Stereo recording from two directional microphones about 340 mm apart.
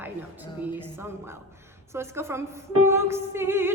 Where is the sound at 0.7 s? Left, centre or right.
Centre.